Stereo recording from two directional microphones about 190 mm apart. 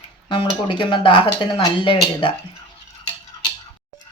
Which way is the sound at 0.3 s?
25° left (ahead or behind).